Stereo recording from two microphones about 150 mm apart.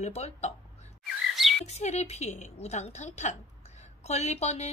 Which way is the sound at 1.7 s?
45° left (ahead or behind).